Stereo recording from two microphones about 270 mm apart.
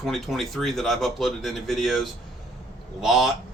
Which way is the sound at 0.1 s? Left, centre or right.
Centre.